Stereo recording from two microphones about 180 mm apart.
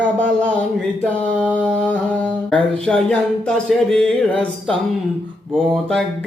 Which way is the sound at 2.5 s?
5° left (ahead or behind).